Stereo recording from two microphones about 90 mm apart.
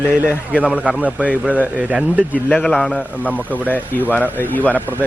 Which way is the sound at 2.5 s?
10° left (ahead or behind).